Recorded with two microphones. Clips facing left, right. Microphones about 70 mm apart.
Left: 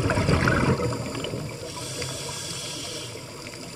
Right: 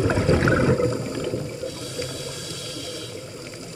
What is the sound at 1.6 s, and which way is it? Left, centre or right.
Snoring, centre.